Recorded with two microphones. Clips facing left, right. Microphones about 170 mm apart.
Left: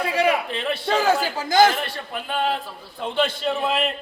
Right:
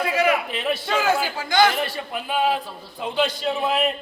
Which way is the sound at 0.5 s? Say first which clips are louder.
Right 1 dB; 5° right (ahead or behind).